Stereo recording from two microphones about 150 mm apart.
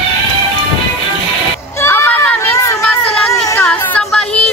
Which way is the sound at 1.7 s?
15° left (ahead or behind).